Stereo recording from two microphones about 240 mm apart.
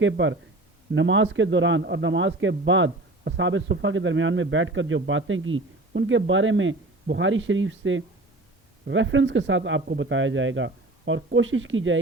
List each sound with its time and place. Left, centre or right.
0.0 s a man's voice: right